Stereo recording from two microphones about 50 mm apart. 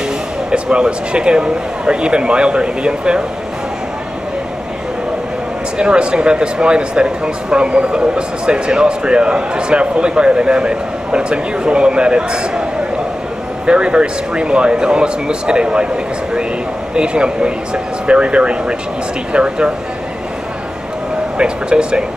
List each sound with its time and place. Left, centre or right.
0.5 s speech: centre
5.8 s speech: centre
13.7 s speech: centre
16.9 s speech: centre
21.4 s speech: centre